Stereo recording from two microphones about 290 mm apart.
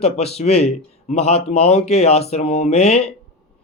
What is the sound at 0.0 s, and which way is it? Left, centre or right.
Speech, left.